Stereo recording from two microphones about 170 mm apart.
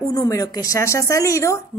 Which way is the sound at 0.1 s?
20° left (ahead or behind).